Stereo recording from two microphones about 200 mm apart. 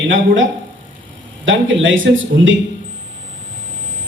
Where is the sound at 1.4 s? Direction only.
70° right (ahead or behind).